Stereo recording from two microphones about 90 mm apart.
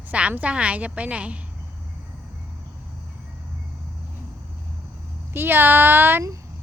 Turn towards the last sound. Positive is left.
turn(degrees=-25)  # may be behind; listen again after turning